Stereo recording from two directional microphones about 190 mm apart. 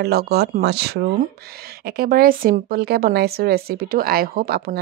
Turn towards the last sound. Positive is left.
turn(degrees=-50)  # may be behind; listen again after turning